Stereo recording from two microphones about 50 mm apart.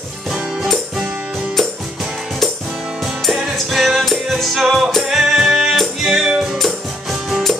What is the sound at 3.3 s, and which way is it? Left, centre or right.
Music, centre.